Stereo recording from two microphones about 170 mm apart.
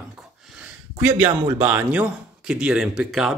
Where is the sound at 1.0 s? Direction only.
10° right (ahead or behind).